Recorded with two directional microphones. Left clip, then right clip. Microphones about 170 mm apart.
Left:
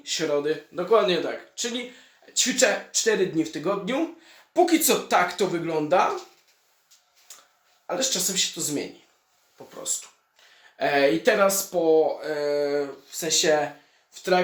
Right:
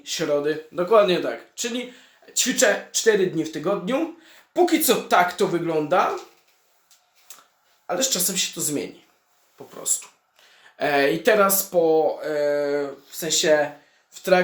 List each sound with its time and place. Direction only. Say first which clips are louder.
0.0 s speech: right 2 dB; 5° right (ahead or behind)
7.3 s a sound: right 1 dB; 10° right (ahead or behind)
7.9 s speech: right 2 dB; 10° right (ahead or behind)
10.8 s speech: right 1 dB; 10° right (ahead or behind)